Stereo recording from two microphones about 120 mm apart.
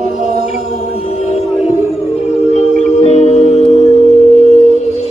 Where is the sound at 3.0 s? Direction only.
60° left (ahead or behind).